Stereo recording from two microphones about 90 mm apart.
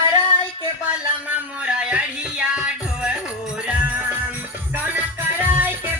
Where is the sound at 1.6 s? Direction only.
15° right (ahead or behind).